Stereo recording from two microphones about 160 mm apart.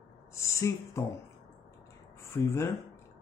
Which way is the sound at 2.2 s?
15° left (ahead or behind).